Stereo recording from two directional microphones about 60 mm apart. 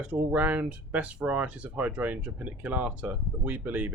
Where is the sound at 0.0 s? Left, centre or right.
Right.